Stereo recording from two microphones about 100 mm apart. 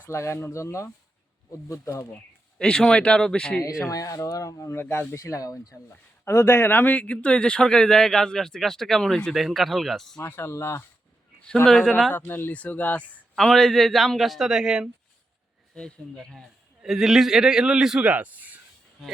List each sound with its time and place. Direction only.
0.1 s speech: 25° left (ahead or behind)
2.6 s speech: 5° left (ahead or behind)
3.6 s speech: 35° left (ahead or behind)
5.1 s speech: 35° left (ahead or behind)
6.2 s speech: 25° left (ahead or behind); by 10.2 s 5° left (ahead or behind)
10.2 s speech: 25° left (ahead or behind)
11.6 s speech: 5° left (ahead or behind)
12.1 s speech: 20° left (ahead or behind); by 14.8 s 5° right (ahead or behind)
15.7 s speech: 10° left (ahead or behind); by 18.6 s 15° right (ahead or behind)